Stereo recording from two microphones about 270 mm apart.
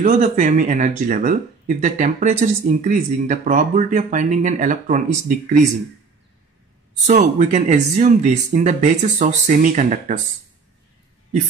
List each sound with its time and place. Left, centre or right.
0.0 s speech: right
7.1 s speech: right